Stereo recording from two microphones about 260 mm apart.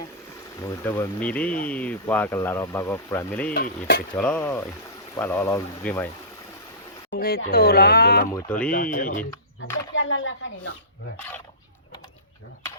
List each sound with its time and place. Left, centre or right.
0.6 s speech: centre
7.1 s speech: left
8.3 s speech: centre
8.7 s speech: left
9.7 s speech: left